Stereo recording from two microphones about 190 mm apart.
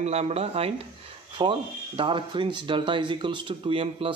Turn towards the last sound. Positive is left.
turn(degrees=-30)  # may be behind; listen again after turning